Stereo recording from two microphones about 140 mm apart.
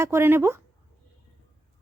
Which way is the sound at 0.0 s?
20° right (ahead or behind).